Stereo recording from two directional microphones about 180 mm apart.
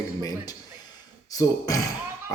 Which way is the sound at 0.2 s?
20° left (ahead or behind).